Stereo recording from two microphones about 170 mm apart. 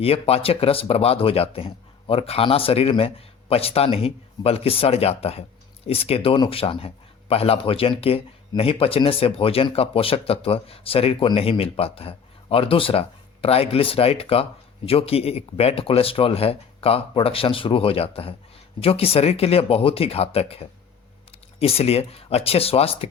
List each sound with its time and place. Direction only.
0.0 s speech: 35° left (ahead or behind)